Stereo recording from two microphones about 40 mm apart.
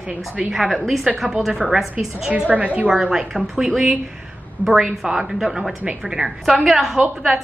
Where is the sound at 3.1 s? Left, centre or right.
Centre.